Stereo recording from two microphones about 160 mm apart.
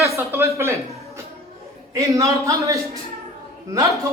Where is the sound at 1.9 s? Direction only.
20° right (ahead or behind).